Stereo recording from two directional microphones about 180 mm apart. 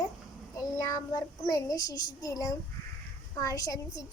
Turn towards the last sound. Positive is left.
turn(degrees=20)  # may be behind; listen again after turning